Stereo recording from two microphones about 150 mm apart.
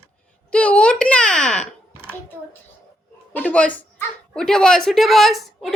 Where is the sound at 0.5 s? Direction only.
10° left (ahead or behind).